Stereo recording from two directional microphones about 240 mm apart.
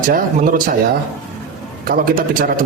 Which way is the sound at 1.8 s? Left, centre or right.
Right.